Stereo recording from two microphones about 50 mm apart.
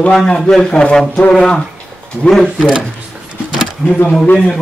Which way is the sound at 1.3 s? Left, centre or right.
Centre.